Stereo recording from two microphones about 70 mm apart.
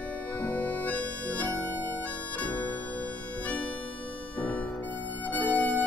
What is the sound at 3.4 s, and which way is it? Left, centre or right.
Harmonica, centre.